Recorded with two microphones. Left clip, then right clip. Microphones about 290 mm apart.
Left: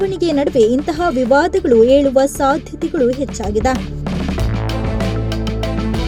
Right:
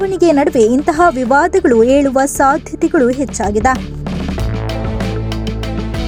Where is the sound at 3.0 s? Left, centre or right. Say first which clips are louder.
Right 3 dB; centre.